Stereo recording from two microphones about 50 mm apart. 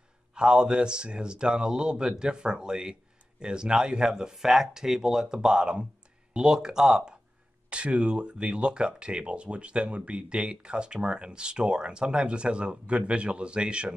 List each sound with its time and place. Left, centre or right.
0.3 s speech: centre
7.7 s speech: right